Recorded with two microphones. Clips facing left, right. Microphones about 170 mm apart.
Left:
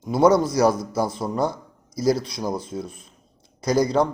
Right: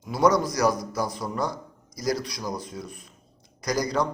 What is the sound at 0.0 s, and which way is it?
A man's voice, 25° left (ahead or behind).